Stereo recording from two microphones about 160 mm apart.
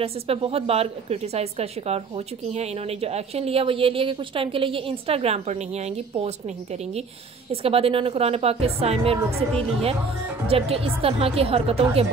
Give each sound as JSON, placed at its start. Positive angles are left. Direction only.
{"t": 0.0, "sound": "a woman's voice", "side_deg": -35}
{"t": 9.5, "sound": "a woman's voice", "side_deg": 5}
{"t": 10.5, "sound": "a woman's voice", "side_deg": -35}